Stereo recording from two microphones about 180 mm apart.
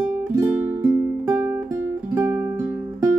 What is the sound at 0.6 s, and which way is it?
Music, 10° right (ahead or behind).